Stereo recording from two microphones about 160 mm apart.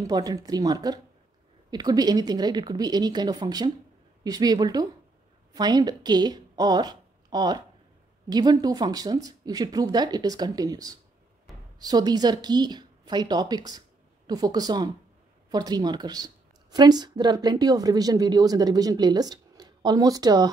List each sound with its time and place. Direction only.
0.0 s a woman's voice: 25° right (ahead or behind)
11.5 s a sound: centre (ahead or behind)
11.8 s a woman's voice: 25° right (ahead or behind)